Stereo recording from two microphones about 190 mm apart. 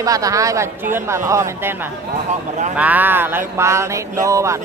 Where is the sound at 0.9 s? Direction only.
15° right (ahead or behind).